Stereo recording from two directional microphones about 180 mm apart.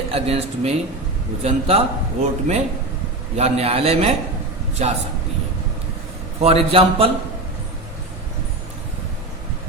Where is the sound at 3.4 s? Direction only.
35° right (ahead or behind).